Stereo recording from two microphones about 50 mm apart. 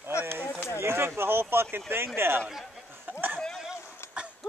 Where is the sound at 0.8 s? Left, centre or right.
Right.